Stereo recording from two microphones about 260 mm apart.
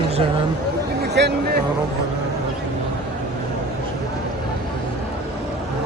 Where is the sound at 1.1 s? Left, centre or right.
Right.